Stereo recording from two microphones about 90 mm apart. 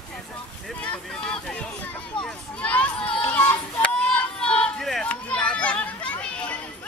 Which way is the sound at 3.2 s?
15° left (ahead or behind).